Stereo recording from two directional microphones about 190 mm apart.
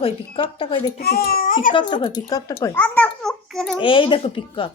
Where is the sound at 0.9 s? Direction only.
50° left (ahead or behind).